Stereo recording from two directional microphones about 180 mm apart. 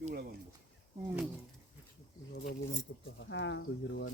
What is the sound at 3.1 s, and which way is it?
Speech, 85° left.